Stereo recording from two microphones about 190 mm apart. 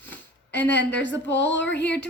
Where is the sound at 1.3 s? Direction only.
70° left (ahead or behind).